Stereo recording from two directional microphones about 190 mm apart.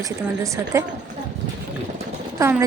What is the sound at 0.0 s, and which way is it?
Speech, 15° right (ahead or behind).